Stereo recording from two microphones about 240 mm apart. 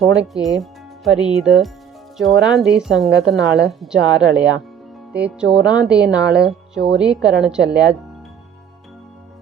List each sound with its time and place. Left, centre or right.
0.0 s speech: centre
3.1 s a woman's voice: right
3.3 s speech: centre